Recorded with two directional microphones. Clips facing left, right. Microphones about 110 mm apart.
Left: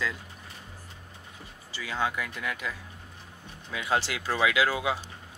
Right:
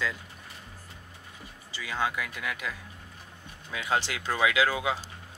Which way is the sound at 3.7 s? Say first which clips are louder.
Left 1 dB; 15° left (ahead or behind).